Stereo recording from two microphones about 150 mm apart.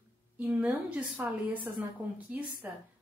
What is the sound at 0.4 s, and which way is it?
A woman's voice, 10° right (ahead or behind).